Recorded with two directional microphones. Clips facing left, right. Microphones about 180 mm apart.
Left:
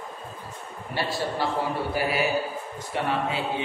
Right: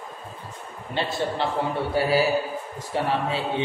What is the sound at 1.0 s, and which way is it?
A man's voice, 20° right (ahead or behind).